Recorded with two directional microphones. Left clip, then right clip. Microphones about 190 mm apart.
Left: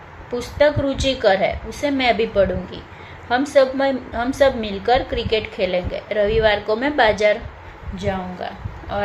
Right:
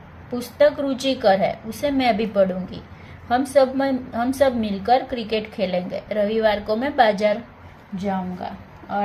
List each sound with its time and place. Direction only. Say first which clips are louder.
0.3 s a woman's voice: left 1 dB; 15° right (ahead or behind)